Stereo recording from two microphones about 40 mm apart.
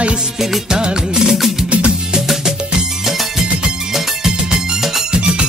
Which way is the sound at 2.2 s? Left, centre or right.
Centre.